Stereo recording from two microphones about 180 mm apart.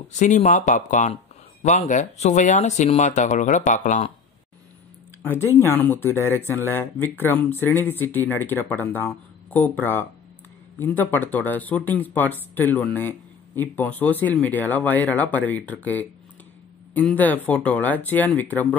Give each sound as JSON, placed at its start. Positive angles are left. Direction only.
{"t": 0.2, "sound": "speech", "side_deg": 40}
{"t": 5.2, "sound": "speech", "side_deg": 10}